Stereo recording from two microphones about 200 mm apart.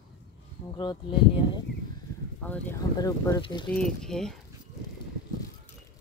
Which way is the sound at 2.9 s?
15° left (ahead or behind).